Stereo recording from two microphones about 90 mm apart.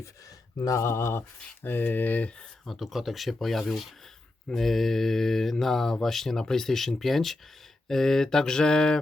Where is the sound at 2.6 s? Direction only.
Centre (ahead or behind).